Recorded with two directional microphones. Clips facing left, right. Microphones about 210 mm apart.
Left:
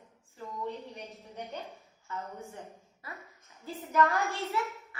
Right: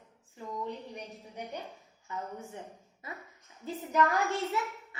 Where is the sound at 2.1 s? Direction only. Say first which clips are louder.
Right 1 dB; 15° right (ahead or behind).